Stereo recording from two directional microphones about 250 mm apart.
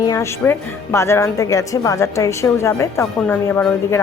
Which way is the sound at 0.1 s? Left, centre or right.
Centre.